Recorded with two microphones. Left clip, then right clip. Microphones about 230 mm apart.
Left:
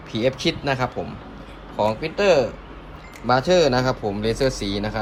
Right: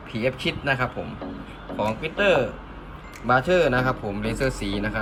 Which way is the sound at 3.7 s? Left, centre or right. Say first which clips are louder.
Left 2 dB; centre.